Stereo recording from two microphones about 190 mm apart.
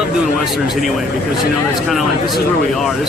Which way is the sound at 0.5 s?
Centre (ahead or behind).